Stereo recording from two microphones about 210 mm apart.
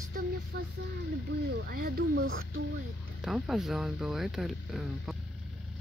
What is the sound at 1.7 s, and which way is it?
Speech, 45° right (ahead or behind).